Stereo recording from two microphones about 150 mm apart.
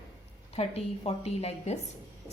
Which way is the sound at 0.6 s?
40° left (ahead or behind).